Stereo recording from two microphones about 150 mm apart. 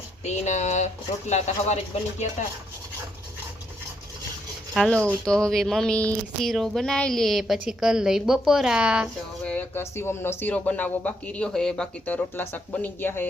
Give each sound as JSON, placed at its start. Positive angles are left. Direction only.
{"t": 0.3, "sound": "speech", "side_deg": 50}
{"t": 4.7, "sound": "speech", "side_deg": 0}
{"t": 9.4, "sound": "speech", "side_deg": 10}